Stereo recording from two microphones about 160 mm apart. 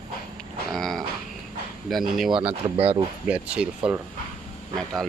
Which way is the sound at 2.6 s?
35° right (ahead or behind).